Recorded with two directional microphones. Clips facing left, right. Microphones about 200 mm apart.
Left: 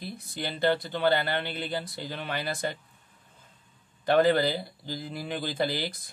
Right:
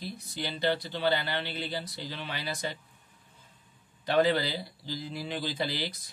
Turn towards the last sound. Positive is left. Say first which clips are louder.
# left 4 dB
turn(degrees=50)  # may be behind; listen again after turning